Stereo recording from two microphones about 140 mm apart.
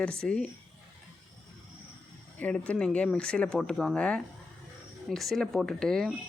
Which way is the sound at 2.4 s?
10° left (ahead or behind).